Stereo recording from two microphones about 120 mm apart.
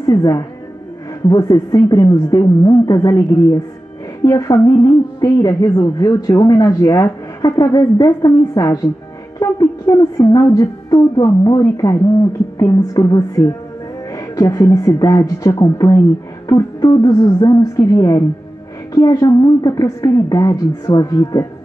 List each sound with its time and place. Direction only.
0.0 s a woman's voice: 30° left (ahead or behind)